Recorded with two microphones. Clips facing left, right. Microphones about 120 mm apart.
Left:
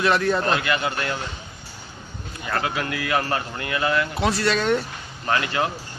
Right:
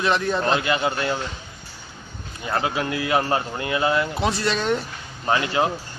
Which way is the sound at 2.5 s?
20° right (ahead or behind).